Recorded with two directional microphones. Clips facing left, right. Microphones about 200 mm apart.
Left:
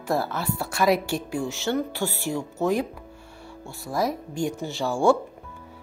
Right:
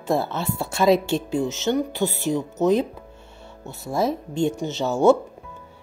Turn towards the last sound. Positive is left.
turn(degrees=-20)  # may be behind; listen again after turning